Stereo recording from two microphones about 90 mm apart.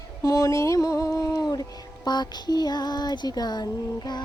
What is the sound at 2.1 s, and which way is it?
Child singing, 50° left (ahead or behind).